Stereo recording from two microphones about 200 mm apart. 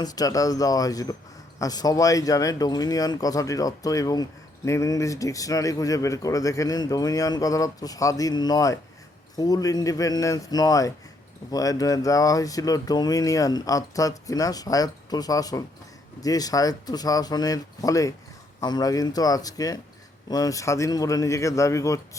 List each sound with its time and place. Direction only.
0.0 s speech: 20° left (ahead or behind)